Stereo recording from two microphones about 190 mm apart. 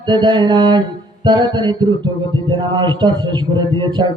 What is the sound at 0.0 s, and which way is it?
A man's voice, 25° right (ahead or behind).